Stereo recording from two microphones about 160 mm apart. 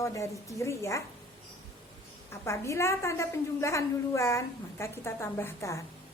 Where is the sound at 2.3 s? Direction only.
15° left (ahead or behind).